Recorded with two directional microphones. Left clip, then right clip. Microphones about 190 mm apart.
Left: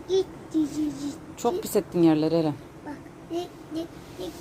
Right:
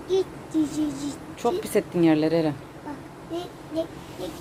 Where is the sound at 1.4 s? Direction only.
15° left (ahead or behind).